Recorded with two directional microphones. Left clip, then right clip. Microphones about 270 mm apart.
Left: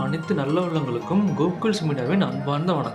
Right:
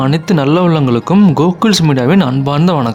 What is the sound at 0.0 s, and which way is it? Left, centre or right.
Speech, right.